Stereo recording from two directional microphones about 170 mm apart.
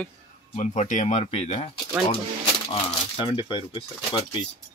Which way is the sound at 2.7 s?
30° left (ahead or behind).